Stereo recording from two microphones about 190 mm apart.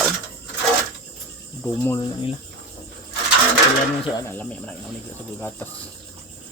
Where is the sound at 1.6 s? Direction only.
10° left (ahead or behind).